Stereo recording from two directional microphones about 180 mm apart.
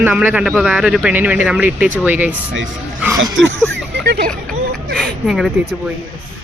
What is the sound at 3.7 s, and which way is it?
Speech, 65° right (ahead or behind).